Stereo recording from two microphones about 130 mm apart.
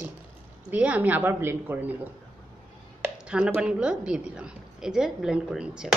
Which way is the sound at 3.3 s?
5° right (ahead or behind).